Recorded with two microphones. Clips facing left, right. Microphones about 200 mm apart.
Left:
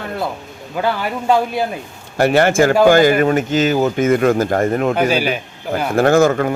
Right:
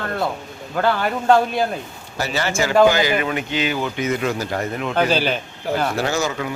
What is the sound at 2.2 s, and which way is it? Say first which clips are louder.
Speech: left 10 dB; 55° left (ahead or behind).